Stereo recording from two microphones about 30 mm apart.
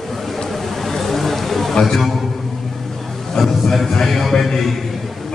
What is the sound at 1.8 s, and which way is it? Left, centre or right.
Speech, centre.